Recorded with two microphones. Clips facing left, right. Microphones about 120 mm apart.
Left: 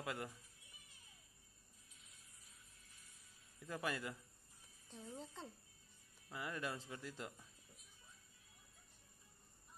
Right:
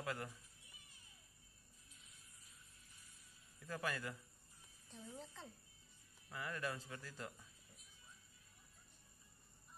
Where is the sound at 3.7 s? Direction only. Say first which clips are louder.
Left 1 dB; 20° left (ahead or behind).